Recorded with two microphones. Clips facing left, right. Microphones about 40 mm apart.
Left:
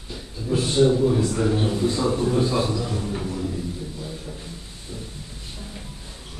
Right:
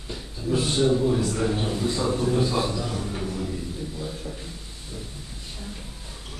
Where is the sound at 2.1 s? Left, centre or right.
Centre.